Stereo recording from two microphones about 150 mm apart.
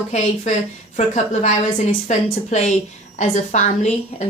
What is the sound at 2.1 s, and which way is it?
A woman's voice, 50° left (ahead or behind).